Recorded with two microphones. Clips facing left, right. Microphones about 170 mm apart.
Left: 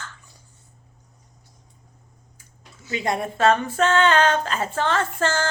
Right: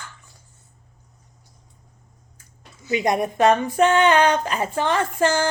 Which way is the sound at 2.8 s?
15° right (ahead or behind).